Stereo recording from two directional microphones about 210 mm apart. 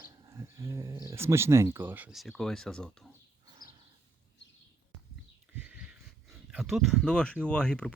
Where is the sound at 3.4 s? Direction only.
20° right (ahead or behind).